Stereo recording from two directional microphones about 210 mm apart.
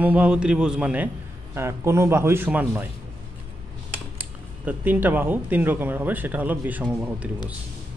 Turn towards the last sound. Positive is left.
turn(degrees=-5)  # may be behind; listen again after turning